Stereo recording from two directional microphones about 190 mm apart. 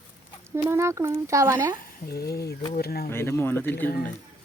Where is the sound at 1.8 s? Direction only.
55° left (ahead or behind).